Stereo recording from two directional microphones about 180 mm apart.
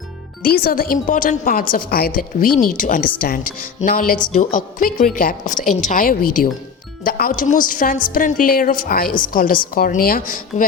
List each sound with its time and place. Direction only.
0.4 s a woman's voice: 55° left (ahead or behind)